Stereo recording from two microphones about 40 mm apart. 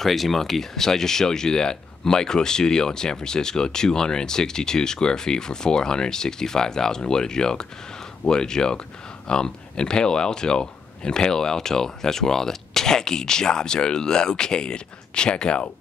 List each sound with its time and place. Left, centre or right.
0.0 s speech: centre; by 15.6 s left